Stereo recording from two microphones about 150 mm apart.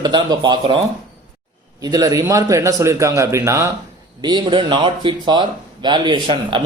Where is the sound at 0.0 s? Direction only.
30° right (ahead or behind).